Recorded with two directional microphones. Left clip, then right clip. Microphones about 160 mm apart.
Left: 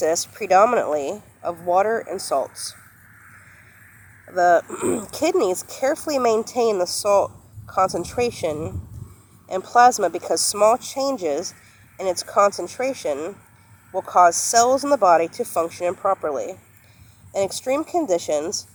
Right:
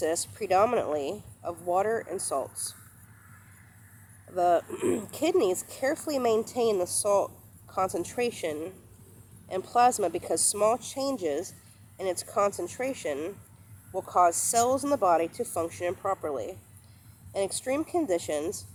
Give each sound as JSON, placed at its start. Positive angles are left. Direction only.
{"t": 0.0, "sound": "speech", "side_deg": 35}
{"t": 4.3, "sound": "speech", "side_deg": 35}
{"t": 9.7, "sound": "speech", "side_deg": 35}